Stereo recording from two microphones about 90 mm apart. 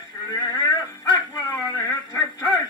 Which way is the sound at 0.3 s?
50° left (ahead or behind).